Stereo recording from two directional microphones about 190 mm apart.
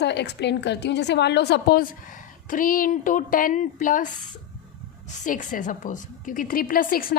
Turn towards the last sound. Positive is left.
turn(degrees=50)  # may be behind; listen again after turning